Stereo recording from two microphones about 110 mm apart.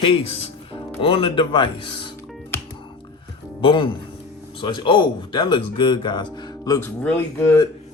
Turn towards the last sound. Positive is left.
turn(degrees=20)  # may be behind; listen again after turning